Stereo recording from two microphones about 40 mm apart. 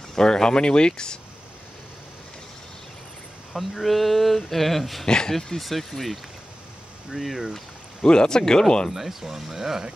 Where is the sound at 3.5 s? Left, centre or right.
Centre.